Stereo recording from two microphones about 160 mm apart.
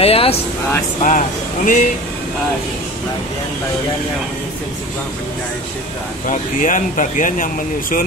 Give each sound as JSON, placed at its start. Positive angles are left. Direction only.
{"t": 0.0, "sound": "speech", "side_deg": 40}
{"t": 1.0, "sound": "speech", "side_deg": 55}
{"t": 6.2, "sound": "speech", "side_deg": 55}